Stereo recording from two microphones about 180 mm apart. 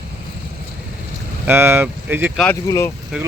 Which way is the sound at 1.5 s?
15° right (ahead or behind).